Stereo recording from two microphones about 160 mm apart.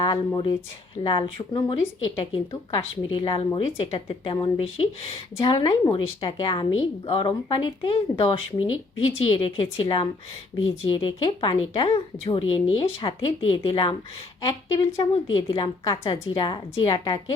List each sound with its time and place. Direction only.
0.0 s a woman's voice: 30° left (ahead or behind)